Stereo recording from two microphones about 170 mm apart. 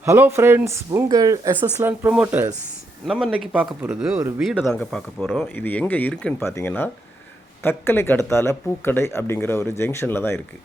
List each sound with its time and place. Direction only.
0.0 s speech: 15° right (ahead or behind)
3.1 s speech: centre (ahead or behind); by 10.4 s 15° left (ahead or behind)